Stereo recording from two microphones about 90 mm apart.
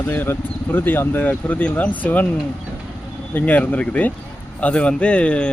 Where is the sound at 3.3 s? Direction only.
20° left (ahead or behind).